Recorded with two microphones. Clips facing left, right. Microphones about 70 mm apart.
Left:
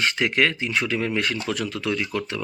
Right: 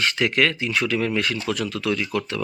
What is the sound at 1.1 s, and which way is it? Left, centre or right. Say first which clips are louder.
Speech: right 1 dB; left.